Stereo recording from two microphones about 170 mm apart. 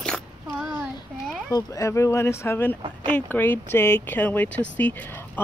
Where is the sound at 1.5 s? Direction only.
20° left (ahead or behind).